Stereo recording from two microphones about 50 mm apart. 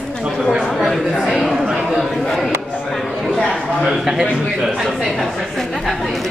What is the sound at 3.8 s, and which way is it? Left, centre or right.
A man's voice, centre.